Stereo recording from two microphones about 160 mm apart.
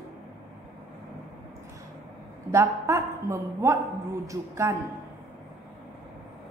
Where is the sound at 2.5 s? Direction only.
20° right (ahead or behind).